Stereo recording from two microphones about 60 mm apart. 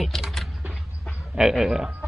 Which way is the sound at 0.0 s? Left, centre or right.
Centre.